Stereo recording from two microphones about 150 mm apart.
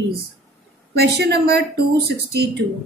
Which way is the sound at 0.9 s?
90° right.